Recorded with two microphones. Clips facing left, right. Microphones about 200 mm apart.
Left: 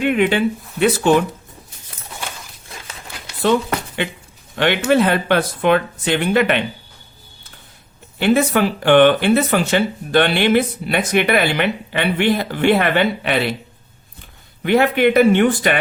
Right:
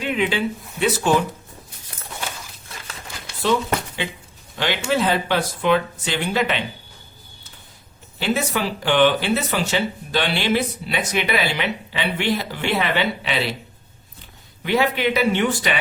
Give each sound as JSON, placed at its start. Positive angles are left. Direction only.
{"t": 0.0, "sound": "speech", "side_deg": 55}
{"t": 4.5, "sound": "speech", "side_deg": 60}
{"t": 8.2, "sound": "speech", "side_deg": 55}
{"t": 14.6, "sound": "speech", "side_deg": 55}